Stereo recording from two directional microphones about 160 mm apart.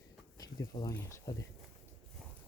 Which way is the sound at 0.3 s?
25° left (ahead or behind).